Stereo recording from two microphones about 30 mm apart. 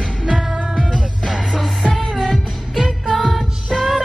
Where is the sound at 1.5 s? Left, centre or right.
Centre.